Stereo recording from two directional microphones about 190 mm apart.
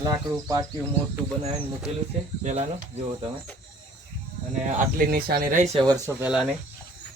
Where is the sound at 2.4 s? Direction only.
35° right (ahead or behind).